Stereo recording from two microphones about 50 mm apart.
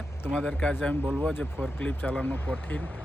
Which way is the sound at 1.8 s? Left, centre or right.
Left.